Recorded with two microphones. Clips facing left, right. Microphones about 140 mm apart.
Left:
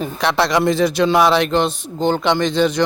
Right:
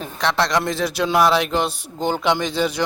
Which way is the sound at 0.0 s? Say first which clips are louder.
Left 3 dB; 5° left (ahead or behind).